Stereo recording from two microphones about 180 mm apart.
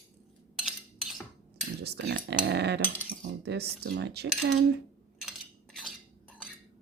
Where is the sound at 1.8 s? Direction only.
65° right (ahead or behind).